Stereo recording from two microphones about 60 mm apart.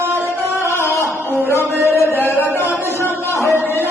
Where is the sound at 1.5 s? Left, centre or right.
Left.